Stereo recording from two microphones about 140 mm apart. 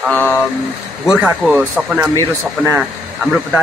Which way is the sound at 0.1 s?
15° left (ahead or behind).